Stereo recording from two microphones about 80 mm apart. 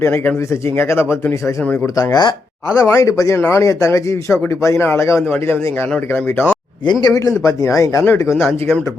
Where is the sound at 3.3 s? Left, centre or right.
Left.